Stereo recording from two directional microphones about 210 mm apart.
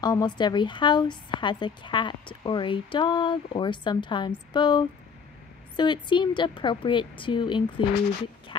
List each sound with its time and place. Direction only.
0.0 s a woman's voice: 20° left (ahead or behind)